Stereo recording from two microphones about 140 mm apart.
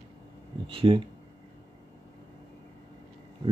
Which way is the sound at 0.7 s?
40° right (ahead or behind).